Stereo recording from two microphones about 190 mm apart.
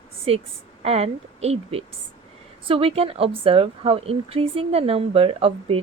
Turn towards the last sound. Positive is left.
turn(degrees=-30)  # may be behind; listen again after turning